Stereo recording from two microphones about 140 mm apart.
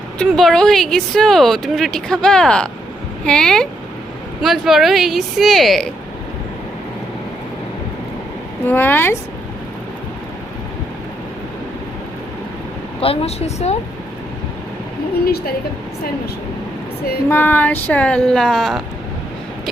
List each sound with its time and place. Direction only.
0.3 s speech: centre (ahead or behind)
8.6 s a woman's voice: 15° left (ahead or behind)
13.0 s a woman's voice: 45° left (ahead or behind)
17.2 s a woman's voice: 15° left (ahead or behind)